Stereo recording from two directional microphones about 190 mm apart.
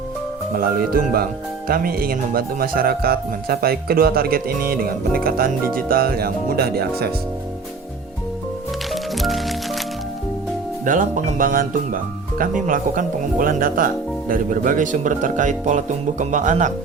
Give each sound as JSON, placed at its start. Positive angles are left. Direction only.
{"t": 0.5, "sound": "speech", "side_deg": -50}
{"t": 9.1, "sound": "music", "side_deg": 0}
{"t": 10.8, "sound": "speech", "side_deg": -40}